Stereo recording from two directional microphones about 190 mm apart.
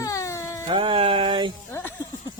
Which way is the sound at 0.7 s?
25° right (ahead or behind).